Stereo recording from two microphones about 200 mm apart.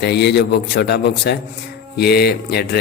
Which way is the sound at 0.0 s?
55° left (ahead or behind).